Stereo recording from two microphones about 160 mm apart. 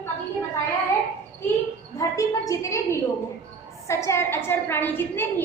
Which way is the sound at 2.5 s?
20° left (ahead or behind).